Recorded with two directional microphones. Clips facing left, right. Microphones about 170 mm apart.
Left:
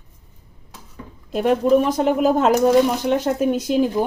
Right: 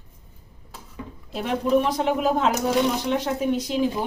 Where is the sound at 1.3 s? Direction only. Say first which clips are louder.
Left 6 dB; 45° left (ahead or behind).